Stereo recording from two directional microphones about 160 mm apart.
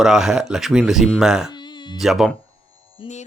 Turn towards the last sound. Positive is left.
turn(degrees=30)  # may be behind; listen again after turning